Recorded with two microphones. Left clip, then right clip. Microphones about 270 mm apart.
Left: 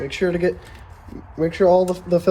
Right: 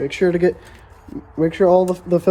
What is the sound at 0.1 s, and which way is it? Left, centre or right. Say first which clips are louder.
Speech: right 2 dB; right.